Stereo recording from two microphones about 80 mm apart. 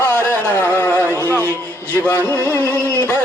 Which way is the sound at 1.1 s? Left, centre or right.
Right.